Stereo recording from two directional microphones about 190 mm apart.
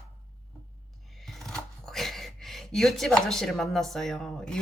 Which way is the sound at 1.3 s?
Centre (ahead or behind).